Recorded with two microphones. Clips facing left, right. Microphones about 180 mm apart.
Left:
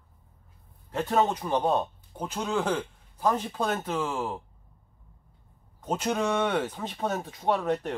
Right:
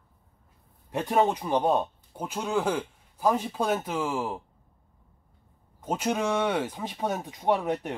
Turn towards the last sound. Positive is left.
turn(degrees=-15)  # may be behind; listen again after turning